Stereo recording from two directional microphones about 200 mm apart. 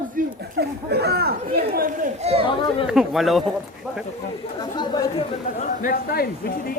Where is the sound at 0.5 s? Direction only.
55° right (ahead or behind).